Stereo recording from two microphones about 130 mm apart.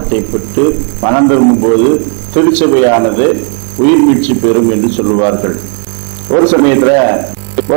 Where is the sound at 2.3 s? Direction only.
10° right (ahead or behind).